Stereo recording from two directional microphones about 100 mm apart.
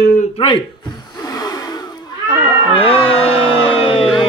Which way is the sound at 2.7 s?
70° left (ahead or behind).